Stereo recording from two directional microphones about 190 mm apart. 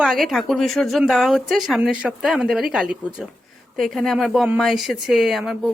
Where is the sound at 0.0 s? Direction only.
Centre (ahead or behind).